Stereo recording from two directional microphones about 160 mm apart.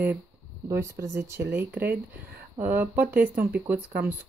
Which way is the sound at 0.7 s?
20° right (ahead or behind).